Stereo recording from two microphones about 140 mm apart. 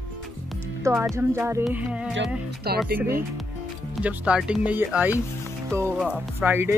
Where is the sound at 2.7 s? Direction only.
90° right.